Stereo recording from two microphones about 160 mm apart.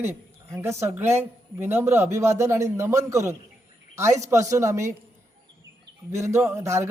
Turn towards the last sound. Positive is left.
turn(degrees=-15)  # may be behind; listen again after turning